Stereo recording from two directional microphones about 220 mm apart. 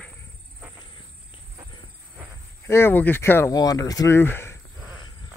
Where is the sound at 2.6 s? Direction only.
10° left (ahead or behind).